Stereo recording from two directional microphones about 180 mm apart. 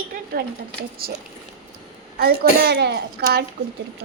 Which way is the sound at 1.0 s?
55° right (ahead or behind).